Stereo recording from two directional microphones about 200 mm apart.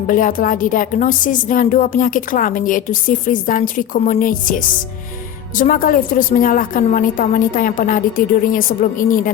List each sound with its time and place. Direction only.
0.1 s a woman's voice: 45° left (ahead or behind)